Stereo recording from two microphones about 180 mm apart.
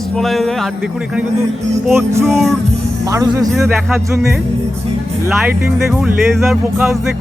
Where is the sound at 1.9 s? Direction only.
15° right (ahead or behind).